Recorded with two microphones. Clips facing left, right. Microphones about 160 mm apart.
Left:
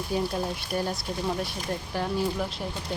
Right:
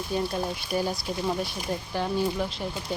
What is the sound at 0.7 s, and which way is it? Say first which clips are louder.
Speech: right 2 dB; 5° right (ahead or behind).